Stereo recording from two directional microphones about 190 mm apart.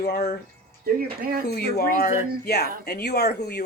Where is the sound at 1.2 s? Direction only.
50° right (ahead or behind).